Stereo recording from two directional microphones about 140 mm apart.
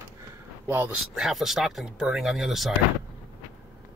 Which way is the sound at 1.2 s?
Centre (ahead or behind).